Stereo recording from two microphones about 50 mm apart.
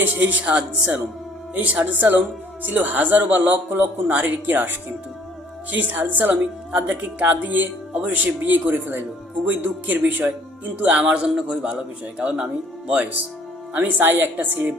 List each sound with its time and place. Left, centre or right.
0.0 s a man's voice: right
5.7 s a man's voice: right
6.4 s a man's voice: right
7.2 s a man's voice: right
11.0 s a man's voice: centre
13.7 s a man's voice: right
14.1 s a woman's voice: right